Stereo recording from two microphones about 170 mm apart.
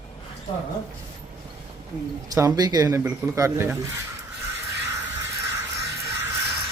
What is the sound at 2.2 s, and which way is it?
Speech, 20° right (ahead or behind).